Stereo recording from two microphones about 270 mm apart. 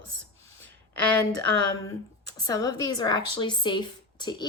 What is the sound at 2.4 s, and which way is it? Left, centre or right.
A woman's voice, centre.